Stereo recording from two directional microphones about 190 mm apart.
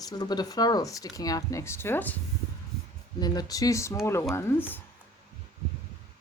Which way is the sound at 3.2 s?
20° left (ahead or behind).